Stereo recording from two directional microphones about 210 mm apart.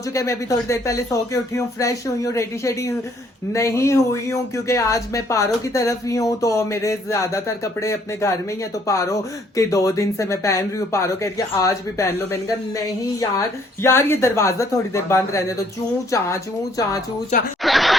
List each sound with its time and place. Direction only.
0.1 s speech: 15° left (ahead or behind)
17.6 s speech: centre (ahead or behind)